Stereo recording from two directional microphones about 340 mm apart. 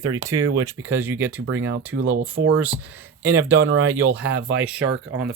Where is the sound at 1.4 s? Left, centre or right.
Right.